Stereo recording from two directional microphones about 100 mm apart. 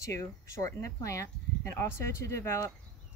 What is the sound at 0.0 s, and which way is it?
Speech, 30° left (ahead or behind).